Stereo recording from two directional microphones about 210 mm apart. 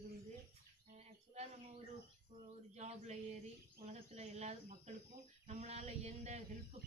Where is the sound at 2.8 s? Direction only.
30° right (ahead or behind).